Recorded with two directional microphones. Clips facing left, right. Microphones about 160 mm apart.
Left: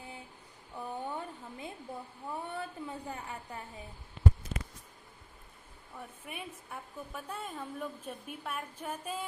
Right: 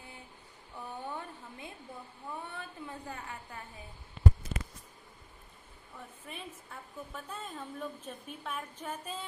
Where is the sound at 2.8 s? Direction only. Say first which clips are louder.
Left 2 dB; 20° left (ahead or behind).